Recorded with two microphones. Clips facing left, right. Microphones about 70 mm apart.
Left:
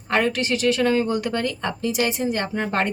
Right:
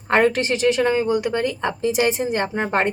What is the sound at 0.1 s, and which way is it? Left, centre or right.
Speech, right.